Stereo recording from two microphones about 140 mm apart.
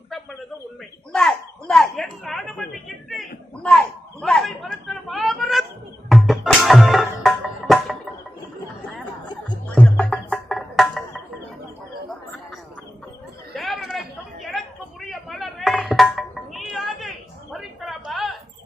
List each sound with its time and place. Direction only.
1.1 s a woman's voice: 5° left (ahead or behind)
3.1 s a sound: 5° left (ahead or behind)
6.1 s music: centre (ahead or behind)
9.2 s music: 30° left (ahead or behind)
9.6 s music: 10° left (ahead or behind)
13.5 s chatter: centre (ahead or behind)
15.1 s music: centre (ahead or behind)
17.5 s a sound: centre (ahead or behind)